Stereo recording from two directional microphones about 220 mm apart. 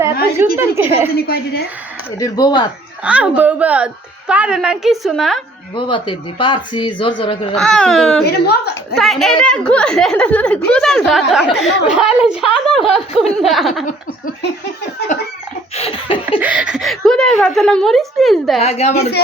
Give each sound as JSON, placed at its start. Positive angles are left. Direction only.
{"t": 0.3, "sound": "a woman's voice", "side_deg": -10}
{"t": 1.1, "sound": "a woman's voice", "side_deg": 45}
{"t": 2.1, "sound": "speech", "side_deg": 15}
{"t": 3.0, "sound": "a woman's voice", "side_deg": -5}
{"t": 5.7, "sound": "speech", "side_deg": 20}
{"t": 7.5, "sound": "a woman's voice", "side_deg": 5}
{"t": 8.2, "sound": "a woman's voice", "side_deg": 45}
{"t": 9.0, "sound": "a woman's voice", "side_deg": 0}
{"t": 15.1, "sound": "chicken", "side_deg": 35}
{"t": 15.7, "sound": "speech", "side_deg": 25}
{"t": 16.4, "sound": "a woman's voice", "side_deg": -5}
{"t": 18.6, "sound": "speech", "side_deg": 30}